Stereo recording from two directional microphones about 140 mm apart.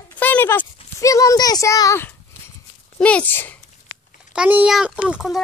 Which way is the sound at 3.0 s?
10° left (ahead or behind).